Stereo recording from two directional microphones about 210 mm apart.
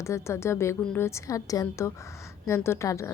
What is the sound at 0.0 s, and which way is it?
A woman's voice, 15° left (ahead or behind).